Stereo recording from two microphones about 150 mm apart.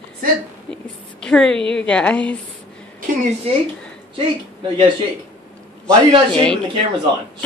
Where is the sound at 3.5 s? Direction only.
40° right (ahead or behind).